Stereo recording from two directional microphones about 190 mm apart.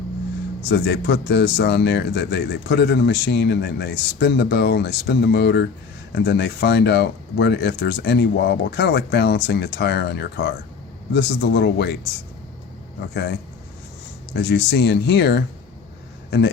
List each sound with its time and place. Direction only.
0.7 s speech: 60° left (ahead or behind)
13.0 s speech: 60° left (ahead or behind)
14.3 s speech: 60° left (ahead or behind)